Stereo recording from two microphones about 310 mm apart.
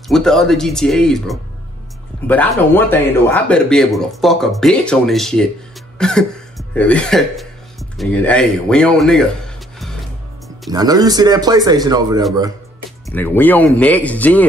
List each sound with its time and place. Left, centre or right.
0.1 s speech: centre
10.7 s speech: centre
13.0 s speech: centre